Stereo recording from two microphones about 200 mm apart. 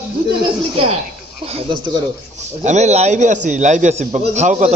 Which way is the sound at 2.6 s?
35° right (ahead or behind).